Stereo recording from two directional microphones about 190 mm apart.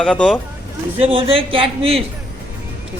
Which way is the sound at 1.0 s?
30° right (ahead or behind).